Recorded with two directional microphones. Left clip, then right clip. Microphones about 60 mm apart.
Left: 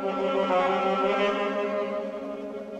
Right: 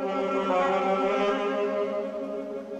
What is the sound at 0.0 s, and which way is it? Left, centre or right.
Music, left.